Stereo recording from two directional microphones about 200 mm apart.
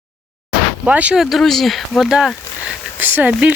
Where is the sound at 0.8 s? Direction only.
5° right (ahead or behind).